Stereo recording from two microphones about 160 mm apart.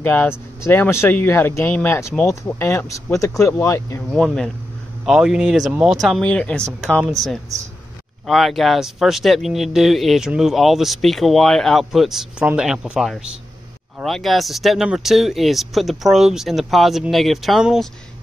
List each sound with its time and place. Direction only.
0.0 s speech: 10° left (ahead or behind)
4.1 s speech: centre (ahead or behind)